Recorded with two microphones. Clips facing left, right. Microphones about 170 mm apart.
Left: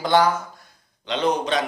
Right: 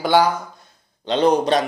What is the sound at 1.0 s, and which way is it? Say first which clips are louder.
Speech: right 6 dB; 35° right (ahead or behind).